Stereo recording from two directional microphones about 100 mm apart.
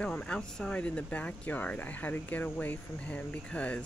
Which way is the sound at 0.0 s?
10° left (ahead or behind).